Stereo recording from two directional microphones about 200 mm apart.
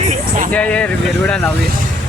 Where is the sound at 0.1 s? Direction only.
40° right (ahead or behind).